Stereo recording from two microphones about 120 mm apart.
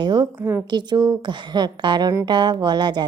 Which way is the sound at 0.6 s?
40° right (ahead or behind).